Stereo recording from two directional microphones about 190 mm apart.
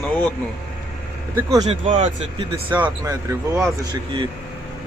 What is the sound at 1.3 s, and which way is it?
Speech, 15° right (ahead or behind).